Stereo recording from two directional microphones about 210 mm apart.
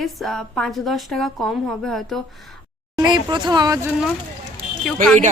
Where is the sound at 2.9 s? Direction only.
20° right (ahead or behind).